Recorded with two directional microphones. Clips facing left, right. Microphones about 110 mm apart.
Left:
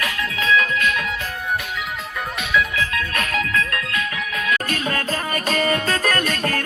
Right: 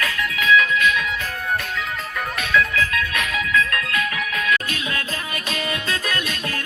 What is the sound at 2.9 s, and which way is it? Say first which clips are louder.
Music: left 1 dB; 35° left (ahead or behind).